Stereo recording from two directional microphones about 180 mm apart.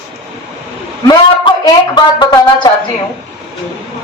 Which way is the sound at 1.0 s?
25° left (ahead or behind).